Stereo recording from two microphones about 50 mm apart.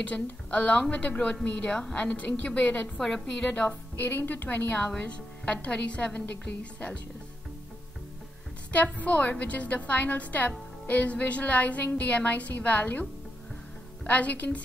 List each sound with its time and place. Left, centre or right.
0.0 s a woman's voice: left
1.7 s a woman's voice: centre
2.0 s a woman's voice: left
3.0 s a woman's voice: centre
3.3 s a woman's voice: left
3.9 s a woman's voice: left
4.7 s a woman's voice: left
8.7 s a woman's voice: left
14.0 s a woman's voice: left